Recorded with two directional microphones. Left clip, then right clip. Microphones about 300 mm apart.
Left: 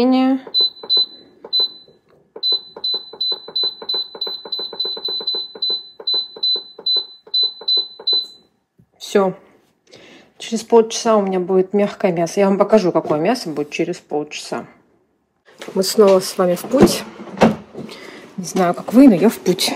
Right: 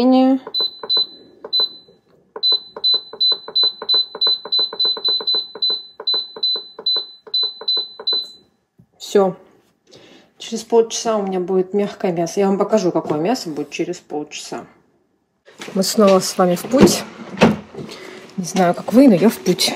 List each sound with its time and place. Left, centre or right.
0.0 s speech: centre
0.5 s fire alarm: centre
6.8 s fire alarm: centre
9.0 s a woman's voice: centre
10.0 s a sound: right
10.5 s speech: centre
15.8 s speech: centre